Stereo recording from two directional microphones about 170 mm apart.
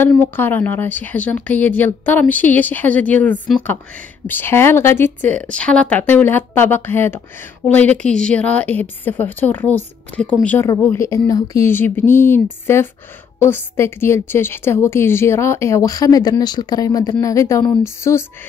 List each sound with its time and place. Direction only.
0.0 s a woman's voice: 10° left (ahead or behind)
13.4 s a woman's voice: 15° left (ahead or behind)